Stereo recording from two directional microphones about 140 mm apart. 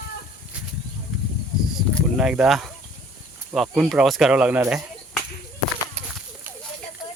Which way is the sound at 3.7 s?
5° right (ahead or behind).